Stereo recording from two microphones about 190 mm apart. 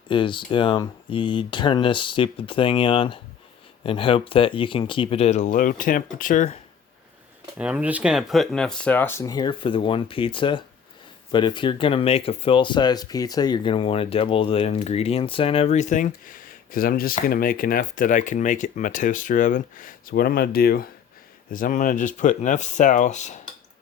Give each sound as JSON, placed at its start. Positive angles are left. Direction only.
{"t": 0.1, "sound": "speech", "side_deg": 25}
{"t": 7.6, "sound": "speech", "side_deg": -5}